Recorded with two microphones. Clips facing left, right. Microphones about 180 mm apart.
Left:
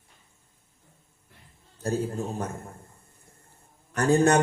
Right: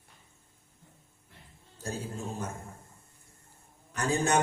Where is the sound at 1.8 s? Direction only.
60° left (ahead or behind).